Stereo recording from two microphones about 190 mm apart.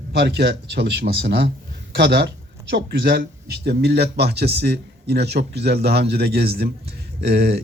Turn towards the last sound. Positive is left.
turn(degrees=-55)  # may be behind; listen again after turning